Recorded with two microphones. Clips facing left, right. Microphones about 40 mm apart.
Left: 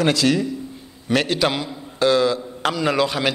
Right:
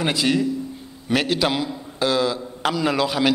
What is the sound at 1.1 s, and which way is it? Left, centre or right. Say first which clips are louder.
A man's voice: left 1 dB; centre.